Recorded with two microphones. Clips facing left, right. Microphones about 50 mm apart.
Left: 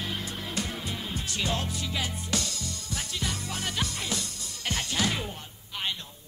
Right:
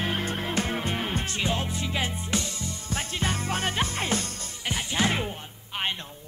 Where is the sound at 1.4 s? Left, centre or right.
Right.